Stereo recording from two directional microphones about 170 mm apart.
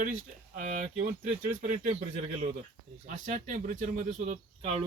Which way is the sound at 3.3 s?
50° right (ahead or behind).